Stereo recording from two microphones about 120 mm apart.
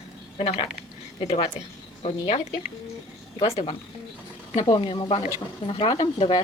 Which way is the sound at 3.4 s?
50° left (ahead or behind).